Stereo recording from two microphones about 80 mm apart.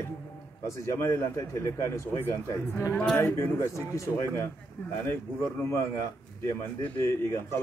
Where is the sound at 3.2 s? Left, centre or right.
Left.